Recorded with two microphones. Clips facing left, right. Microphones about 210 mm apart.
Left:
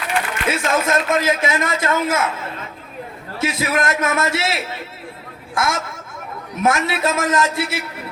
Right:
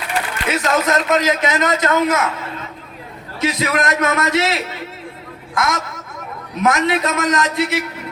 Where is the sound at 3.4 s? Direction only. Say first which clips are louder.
Right 1 dB; 25° left (ahead or behind).